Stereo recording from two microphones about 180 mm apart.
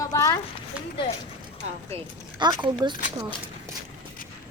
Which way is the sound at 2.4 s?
25° right (ahead or behind).